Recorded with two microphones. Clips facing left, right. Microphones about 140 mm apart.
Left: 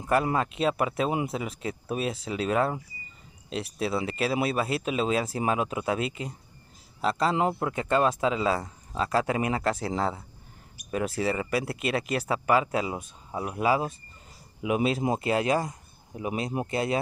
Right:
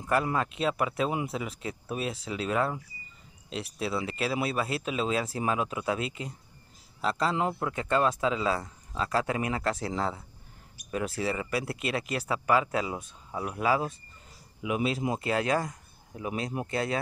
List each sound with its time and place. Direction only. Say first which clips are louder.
0.0 s speech: left 3 dB; 20° left (ahead or behind)
14.6 s speech: left 3 dB; 25° left (ahead or behind)